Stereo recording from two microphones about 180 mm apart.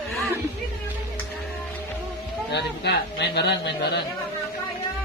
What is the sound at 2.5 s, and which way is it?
A man's voice, 70° left (ahead or behind).